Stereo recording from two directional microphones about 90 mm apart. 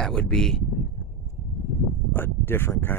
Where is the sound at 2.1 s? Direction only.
25° left (ahead or behind).